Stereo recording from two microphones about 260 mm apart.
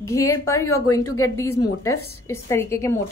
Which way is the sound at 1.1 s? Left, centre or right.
Left.